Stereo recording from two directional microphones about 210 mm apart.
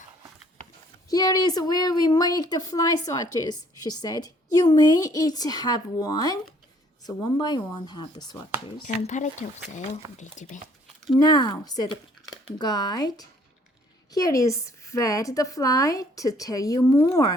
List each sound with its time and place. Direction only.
1.1 s a woman's voice: 15° left (ahead or behind)
8.6 s speech: 35° left (ahead or behind)
11.2 s a woman's voice: 20° left (ahead or behind)